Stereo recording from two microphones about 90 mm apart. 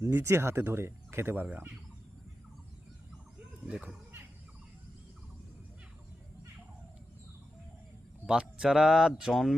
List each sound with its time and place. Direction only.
0.0 s speech: 30° right (ahead or behind)
3.7 s speech: 10° right (ahead or behind)
8.3 s speech: 10° right (ahead or behind)